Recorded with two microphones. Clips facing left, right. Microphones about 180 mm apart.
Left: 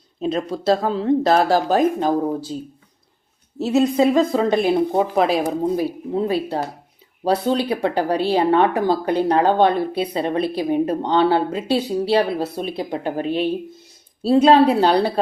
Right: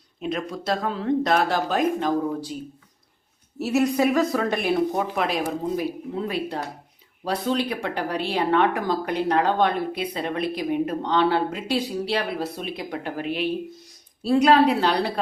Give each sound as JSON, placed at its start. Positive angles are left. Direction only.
{"t": 0.2, "sound": "speech", "side_deg": 30}
{"t": 3.6, "sound": "speech", "side_deg": 20}